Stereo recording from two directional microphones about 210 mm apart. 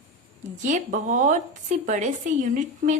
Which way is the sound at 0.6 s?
35° right (ahead or behind).